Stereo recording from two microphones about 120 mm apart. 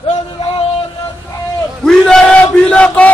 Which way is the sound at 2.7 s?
10° left (ahead or behind).